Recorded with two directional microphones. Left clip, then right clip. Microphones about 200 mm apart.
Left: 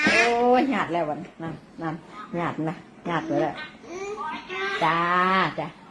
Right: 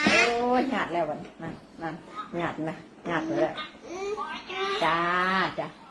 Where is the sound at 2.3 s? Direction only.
35° left (ahead or behind).